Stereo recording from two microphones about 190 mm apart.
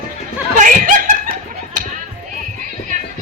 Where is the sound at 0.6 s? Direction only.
40° right (ahead or behind).